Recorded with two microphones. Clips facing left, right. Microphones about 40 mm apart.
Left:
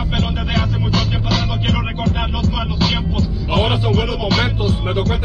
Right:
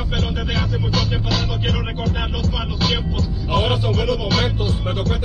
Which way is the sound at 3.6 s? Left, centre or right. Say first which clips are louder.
Left 1 dB; centre.